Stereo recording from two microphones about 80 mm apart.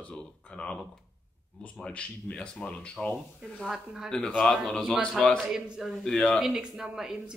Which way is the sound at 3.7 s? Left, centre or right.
Centre.